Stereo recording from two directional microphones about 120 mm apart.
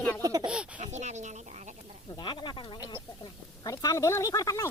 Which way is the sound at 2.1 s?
40° left (ahead or behind).